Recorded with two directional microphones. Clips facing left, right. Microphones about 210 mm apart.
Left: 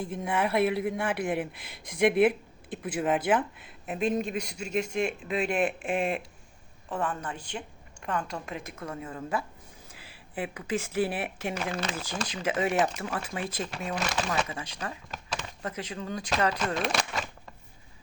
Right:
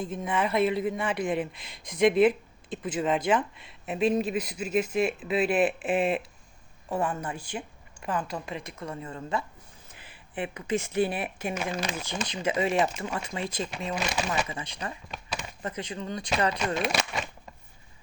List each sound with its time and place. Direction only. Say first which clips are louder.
0.1 s a woman's voice: left 1 dB; 10° left (ahead or behind)
11.2 s speech: right 1 dB; 90° left
11.5 s a woman's voice: right 2 dB; 10° right (ahead or behind)
12.3 s speech: right 1 dB; 5° left (ahead or behind)
13.9 s speech: even; 10° right (ahead or behind)
15.3 s a sound: even; 10° right (ahead or behind)
15.7 s speech: right 1 dB; 5° left (ahead or behind)